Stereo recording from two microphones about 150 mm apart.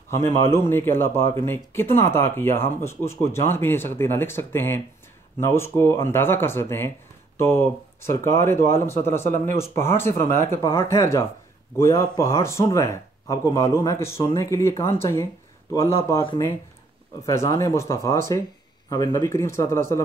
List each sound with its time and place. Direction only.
0.1 s speech: 15° left (ahead or behind)
17.3 s speech: 20° left (ahead or behind)